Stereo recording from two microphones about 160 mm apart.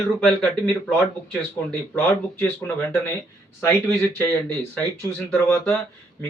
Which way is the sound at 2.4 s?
15° left (ahead or behind).